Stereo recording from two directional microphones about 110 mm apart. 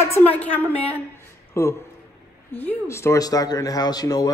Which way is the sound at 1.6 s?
25° left (ahead or behind).